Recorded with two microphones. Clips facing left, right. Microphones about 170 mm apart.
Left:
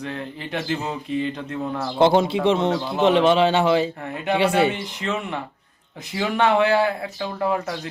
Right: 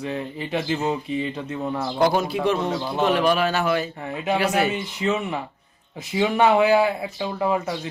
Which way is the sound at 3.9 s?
Centre (ahead or behind).